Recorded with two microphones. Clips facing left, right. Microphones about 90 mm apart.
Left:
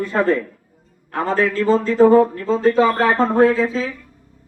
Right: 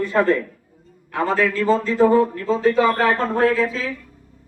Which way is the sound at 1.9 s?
30° left (ahead or behind).